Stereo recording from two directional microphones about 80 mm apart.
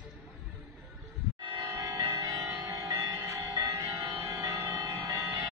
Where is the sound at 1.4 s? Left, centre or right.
Right.